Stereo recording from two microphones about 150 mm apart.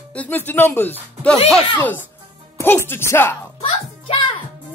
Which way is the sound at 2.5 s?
15° left (ahead or behind).